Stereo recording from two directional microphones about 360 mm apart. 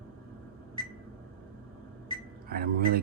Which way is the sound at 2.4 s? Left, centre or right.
Right.